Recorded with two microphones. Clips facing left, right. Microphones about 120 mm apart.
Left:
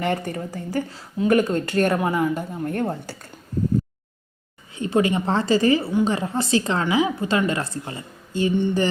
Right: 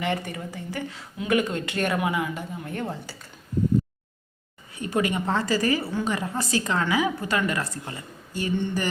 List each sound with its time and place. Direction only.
0.0 s speech: 45° left (ahead or behind)
4.7 s a woman's voice: 25° left (ahead or behind)
8.5 s a sound: 15° left (ahead or behind)